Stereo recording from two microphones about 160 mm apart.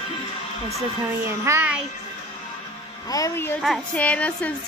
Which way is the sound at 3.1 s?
20° left (ahead or behind).